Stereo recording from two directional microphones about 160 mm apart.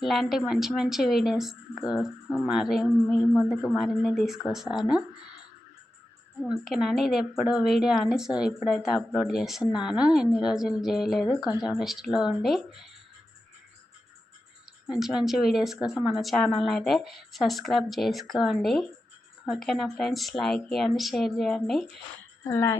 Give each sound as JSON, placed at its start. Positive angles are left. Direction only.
{"t": 0.0, "sound": "a woman's voice", "side_deg": 0}
{"t": 6.4, "sound": "a woman's voice", "side_deg": 0}
{"t": 14.9, "sound": "a woman's voice", "side_deg": 0}
{"t": 22.4, "sound": "speech", "side_deg": 20}